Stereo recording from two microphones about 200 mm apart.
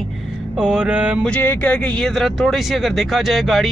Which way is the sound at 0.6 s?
5° right (ahead or behind).